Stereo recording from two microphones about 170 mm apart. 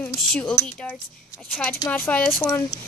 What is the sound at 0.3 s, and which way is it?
Speech, 5° left (ahead or behind).